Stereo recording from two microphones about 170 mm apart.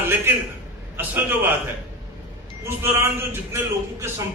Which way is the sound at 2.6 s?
15° right (ahead or behind).